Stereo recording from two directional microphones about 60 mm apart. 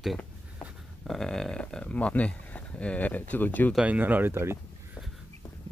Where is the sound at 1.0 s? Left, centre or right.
Centre; by 3.7 s left.